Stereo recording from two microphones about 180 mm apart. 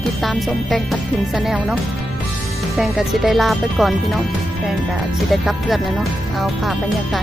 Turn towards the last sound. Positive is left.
turn(degrees=0)  # may be behind; listen again after turning